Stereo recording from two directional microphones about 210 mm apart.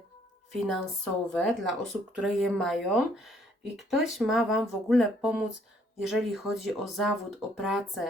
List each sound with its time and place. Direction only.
0.5 s speech: centre (ahead or behind)